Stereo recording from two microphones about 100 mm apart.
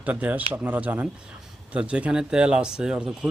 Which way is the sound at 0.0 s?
15° right (ahead or behind).